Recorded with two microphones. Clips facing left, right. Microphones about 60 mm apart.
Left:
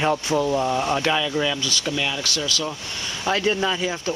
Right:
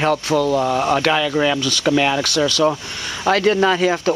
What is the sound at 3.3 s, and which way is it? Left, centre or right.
Speech, right.